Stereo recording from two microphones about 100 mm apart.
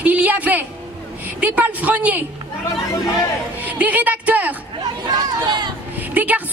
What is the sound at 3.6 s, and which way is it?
Speech, 15° right (ahead or behind).